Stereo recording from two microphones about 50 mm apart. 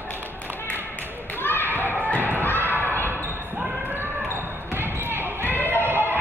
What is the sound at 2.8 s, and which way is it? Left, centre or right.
Basketball bounce, left.